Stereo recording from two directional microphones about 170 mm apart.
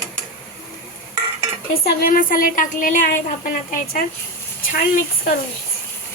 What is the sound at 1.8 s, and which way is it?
A woman's voice, 60° left (ahead or behind).